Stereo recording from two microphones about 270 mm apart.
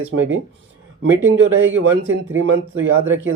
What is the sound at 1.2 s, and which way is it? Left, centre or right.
Speech, right.